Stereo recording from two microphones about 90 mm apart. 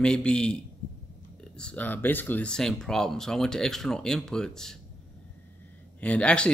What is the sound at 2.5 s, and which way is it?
Speech, 5° left (ahead or behind).